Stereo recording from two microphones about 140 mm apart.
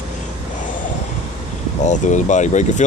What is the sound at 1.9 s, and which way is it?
Speech, 60° left (ahead or behind).